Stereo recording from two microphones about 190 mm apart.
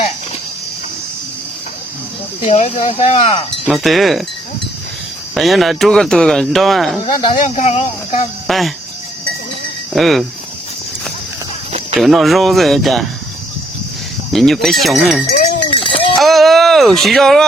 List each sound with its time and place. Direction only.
2.4 s speech: 40° left (ahead or behind)
3.7 s speech: centre (ahead or behind)
5.3 s speech: centre (ahead or behind)
7.0 s speech: 25° left (ahead or behind)
7.4 s speech: 40° left (ahead or behind)
8.4 s speech: centre (ahead or behind)
9.9 s speech: centre (ahead or behind)
11.9 s speech: centre (ahead or behind)
14.3 s speech: centre (ahead or behind)
15.6 s a sound: 25° left (ahead or behind)
16.1 s speech: centre (ahead or behind)